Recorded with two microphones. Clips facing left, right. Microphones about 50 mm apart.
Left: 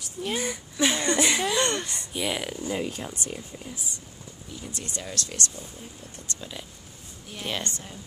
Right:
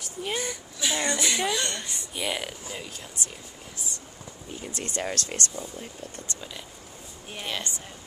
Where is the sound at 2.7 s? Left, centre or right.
Left.